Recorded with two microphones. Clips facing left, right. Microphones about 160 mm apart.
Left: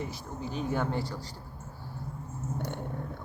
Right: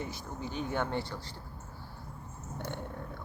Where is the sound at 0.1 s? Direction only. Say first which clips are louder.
Left 2 dB; 35° left (ahead or behind).